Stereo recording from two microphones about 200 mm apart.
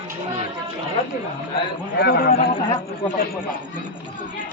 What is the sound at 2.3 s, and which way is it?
Speech, 25° left (ahead or behind).